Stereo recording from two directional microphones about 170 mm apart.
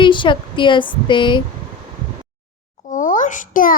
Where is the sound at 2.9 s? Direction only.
50° left (ahead or behind).